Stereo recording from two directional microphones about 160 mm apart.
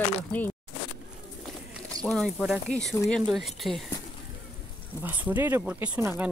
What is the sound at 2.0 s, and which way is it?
Speech, 5° left (ahead or behind).